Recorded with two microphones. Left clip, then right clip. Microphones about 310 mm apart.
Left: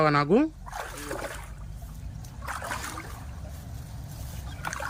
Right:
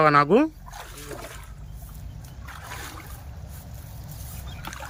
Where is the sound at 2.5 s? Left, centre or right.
Centre.